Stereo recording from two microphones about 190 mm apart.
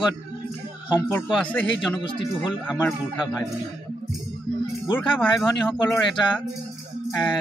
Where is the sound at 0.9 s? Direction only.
10° left (ahead or behind).